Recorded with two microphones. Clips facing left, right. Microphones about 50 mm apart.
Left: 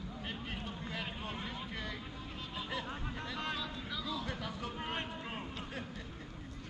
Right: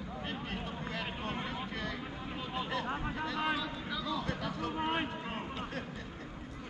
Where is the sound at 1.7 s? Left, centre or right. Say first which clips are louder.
Right 3 dB; centre.